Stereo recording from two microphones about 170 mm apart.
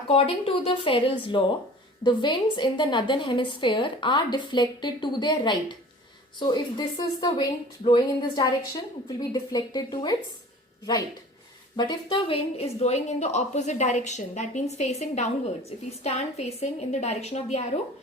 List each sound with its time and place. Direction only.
0.1 s a woman's voice: 35° left (ahead or behind)
11.8 s a woman's voice: 30° left (ahead or behind)